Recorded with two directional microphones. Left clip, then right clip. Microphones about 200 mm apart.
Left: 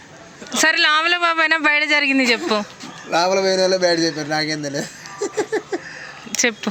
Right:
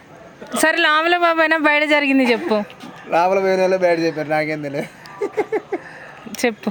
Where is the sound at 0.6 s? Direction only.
15° right (ahead or behind).